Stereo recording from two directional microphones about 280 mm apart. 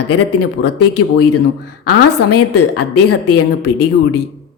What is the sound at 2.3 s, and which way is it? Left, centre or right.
Speech, left.